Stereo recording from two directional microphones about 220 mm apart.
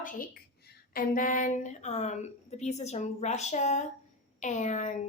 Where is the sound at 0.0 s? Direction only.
35° left (ahead or behind).